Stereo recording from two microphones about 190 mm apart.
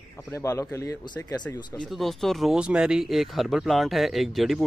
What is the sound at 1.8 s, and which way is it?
Speech, centre (ahead or behind).